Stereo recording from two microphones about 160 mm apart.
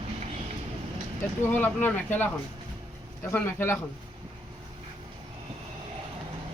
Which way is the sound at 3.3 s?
15° left (ahead or behind).